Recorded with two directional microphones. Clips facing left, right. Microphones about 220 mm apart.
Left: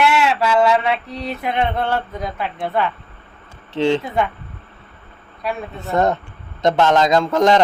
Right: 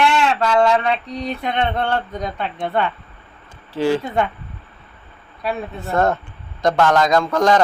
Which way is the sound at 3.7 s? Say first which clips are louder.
Left 1 dB; 25° left (ahead or behind).